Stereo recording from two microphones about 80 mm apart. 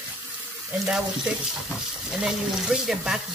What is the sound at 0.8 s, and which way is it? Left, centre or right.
Speech, centre.